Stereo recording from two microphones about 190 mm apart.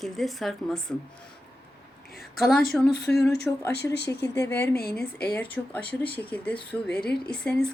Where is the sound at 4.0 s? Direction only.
65° left (ahead or behind).